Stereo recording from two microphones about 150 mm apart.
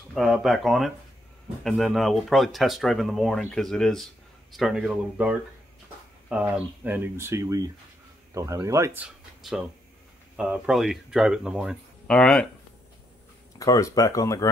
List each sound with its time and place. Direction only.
0.1 s speech: centre (ahead or behind); by 9.0 s 20° right (ahead or behind)
9.0 s a sound: 5° right (ahead or behind)
10.3 s speech: 5° right (ahead or behind)
13.6 s speech: 20° left (ahead or behind)